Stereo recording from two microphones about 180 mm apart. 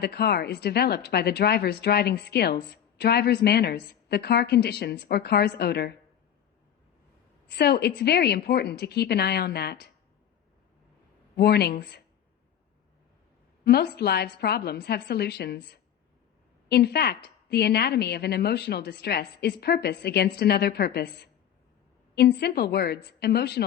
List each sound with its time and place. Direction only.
0.0 s a woman's voice: 65° left (ahead or behind)
7.4 s a woman's voice: 70° left (ahead or behind)
11.3 s a woman's voice: 65° left (ahead or behind)
13.7 s a woman's voice: 65° left (ahead or behind)